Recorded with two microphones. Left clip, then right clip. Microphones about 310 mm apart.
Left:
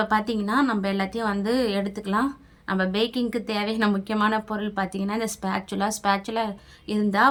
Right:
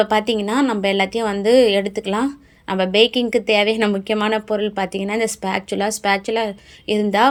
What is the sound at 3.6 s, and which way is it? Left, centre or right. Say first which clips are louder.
Speech: right 8 dB; centre.